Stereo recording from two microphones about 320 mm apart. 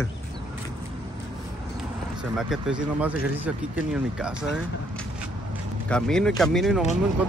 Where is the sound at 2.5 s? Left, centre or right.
Centre.